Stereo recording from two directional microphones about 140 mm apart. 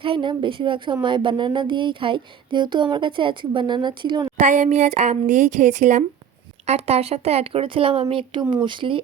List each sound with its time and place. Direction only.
0.0 s speech: 35° right (ahead or behind)
4.4 s speech: 60° right (ahead or behind); by 9.0 s 35° right (ahead or behind)